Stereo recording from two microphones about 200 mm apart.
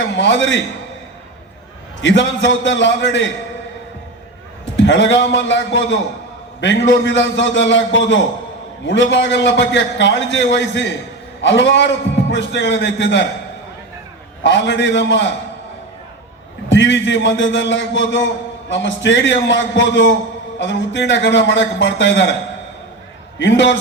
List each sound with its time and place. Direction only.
0.0 s a man's voice: 65° left (ahead or behind)
2.0 s a man's voice: 65° left (ahead or behind)
4.8 s a man's voice: 65° left (ahead or behind)
14.4 s a man's voice: 65° left (ahead or behind)
16.6 s a man's voice: 65° left (ahead or behind)
23.4 s a man's voice: 65° left (ahead or behind)